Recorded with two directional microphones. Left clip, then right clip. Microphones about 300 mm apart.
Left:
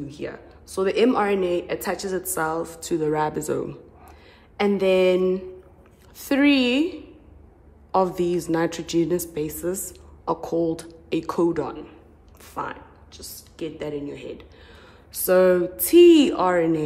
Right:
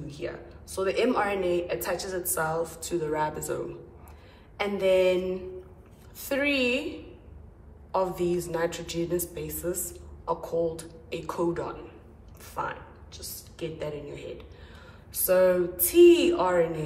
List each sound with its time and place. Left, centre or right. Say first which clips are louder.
0.1 s a woman's voice: left 2 dB; left